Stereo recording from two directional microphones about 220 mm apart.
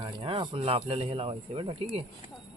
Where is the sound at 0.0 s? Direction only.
20° right (ahead or behind).